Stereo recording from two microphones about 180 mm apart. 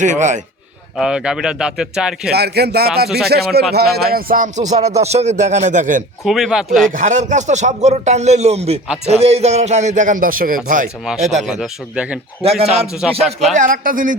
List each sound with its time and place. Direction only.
0.0 s speech: 45° right (ahead or behind)
0.9 s speech: 5° right (ahead or behind)
2.3 s speech: 65° right (ahead or behind); by 6.0 s 45° right (ahead or behind)
6.2 s speech: centre (ahead or behind)
6.9 s speech: 40° right (ahead or behind)
11.4 s speech: 5° right (ahead or behind)
12.4 s speech: 35° right (ahead or behind)
13.0 s speech: 5° right (ahead or behind)
13.6 s speech: 50° right (ahead or behind)